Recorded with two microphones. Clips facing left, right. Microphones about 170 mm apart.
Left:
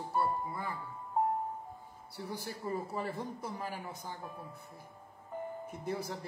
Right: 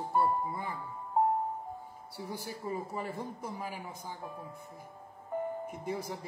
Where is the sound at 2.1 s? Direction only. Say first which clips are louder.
Right 1 dB; 10° right (ahead or behind).